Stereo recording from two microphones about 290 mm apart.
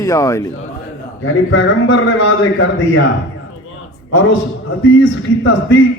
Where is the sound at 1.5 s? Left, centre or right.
Left.